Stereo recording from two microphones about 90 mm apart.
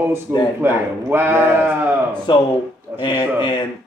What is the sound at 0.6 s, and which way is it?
Speech, 25° right (ahead or behind).